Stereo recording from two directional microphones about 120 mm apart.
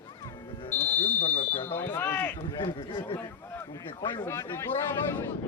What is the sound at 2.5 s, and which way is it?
Speech, 35° left (ahead or behind).